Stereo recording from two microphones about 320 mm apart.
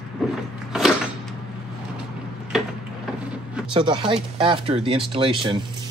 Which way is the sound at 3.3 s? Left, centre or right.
Centre.